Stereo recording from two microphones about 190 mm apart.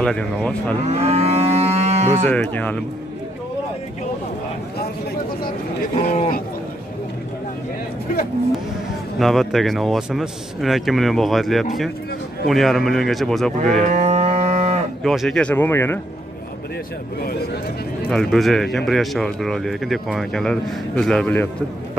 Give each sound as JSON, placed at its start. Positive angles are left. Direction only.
{"t": 0.0, "sound": "speech", "side_deg": 5}
{"t": 0.8, "sound": "moo", "side_deg": -35}
{"t": 2.2, "sound": "speech", "side_deg": 10}
{"t": 5.9, "sound": "speech", "side_deg": 35}
{"t": 9.2, "sound": "speech", "side_deg": 0}
{"t": 13.8, "sound": "livestock", "side_deg": -35}
{"t": 15.0, "sound": "speech", "side_deg": 0}
{"t": 18.1, "sound": "speech", "side_deg": 0}